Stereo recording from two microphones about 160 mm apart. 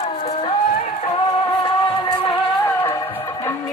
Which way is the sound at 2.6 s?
15° left (ahead or behind).